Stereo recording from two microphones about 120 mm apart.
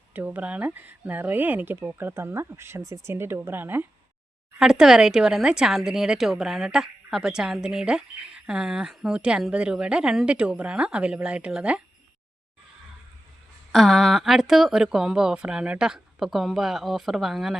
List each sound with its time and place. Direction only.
0.1 s speech: 15° right (ahead or behind)
4.6 s a woman's voice: 5° right (ahead or behind)
13.7 s a woman's voice: centre (ahead or behind)